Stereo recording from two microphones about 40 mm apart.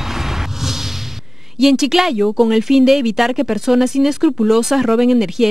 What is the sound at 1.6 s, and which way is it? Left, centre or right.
Speech, centre.